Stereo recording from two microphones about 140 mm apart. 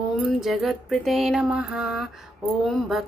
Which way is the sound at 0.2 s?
Centre (ahead or behind).